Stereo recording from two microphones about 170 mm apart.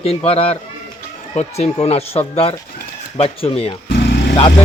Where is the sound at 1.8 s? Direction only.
35° left (ahead or behind).